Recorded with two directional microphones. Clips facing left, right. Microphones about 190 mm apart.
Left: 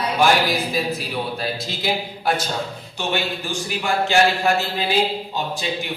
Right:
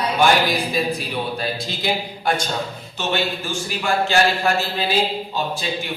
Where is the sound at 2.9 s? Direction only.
15° left (ahead or behind).